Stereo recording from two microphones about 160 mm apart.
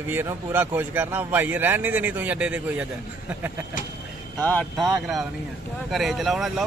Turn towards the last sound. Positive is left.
turn(degrees=0)  # may be behind; listen again after turning